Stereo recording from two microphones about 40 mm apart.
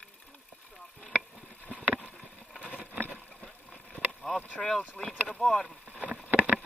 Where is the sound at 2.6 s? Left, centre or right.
Right.